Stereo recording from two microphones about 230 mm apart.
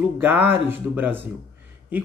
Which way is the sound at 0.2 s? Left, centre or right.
Centre.